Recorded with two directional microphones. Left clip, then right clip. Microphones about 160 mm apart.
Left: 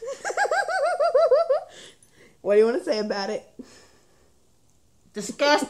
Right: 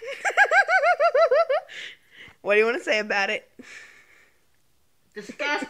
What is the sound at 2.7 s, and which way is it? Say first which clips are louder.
Laughter: right 2 dB; 20° right (ahead or behind).